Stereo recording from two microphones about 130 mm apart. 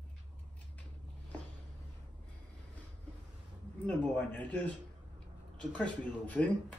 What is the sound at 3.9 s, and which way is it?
Speech, 10° left (ahead or behind).